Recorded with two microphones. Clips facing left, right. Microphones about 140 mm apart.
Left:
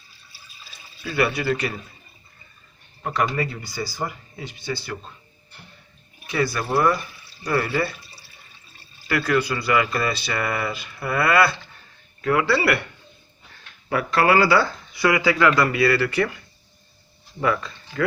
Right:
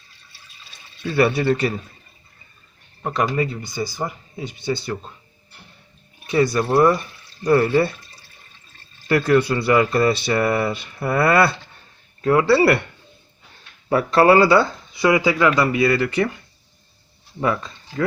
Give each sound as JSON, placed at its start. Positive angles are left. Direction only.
{"t": 0.3, "sound": "water", "side_deg": 5}
{"t": 1.0, "sound": "speech", "side_deg": -25}
{"t": 3.0, "sound": "speech", "side_deg": -20}
{"t": 6.2, "sound": "speech", "side_deg": -25}
{"t": 9.0, "sound": "speech", "side_deg": -25}
{"t": 13.9, "sound": "speech", "side_deg": -30}
{"t": 17.4, "sound": "speech", "side_deg": -25}